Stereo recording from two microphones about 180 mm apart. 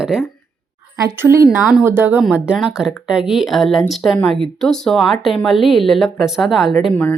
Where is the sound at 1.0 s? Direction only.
15° right (ahead or behind).